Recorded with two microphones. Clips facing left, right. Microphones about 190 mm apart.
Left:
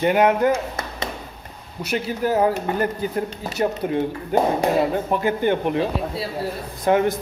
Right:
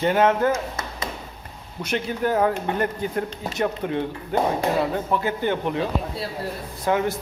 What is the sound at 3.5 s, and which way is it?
Speech, 35° left (ahead or behind).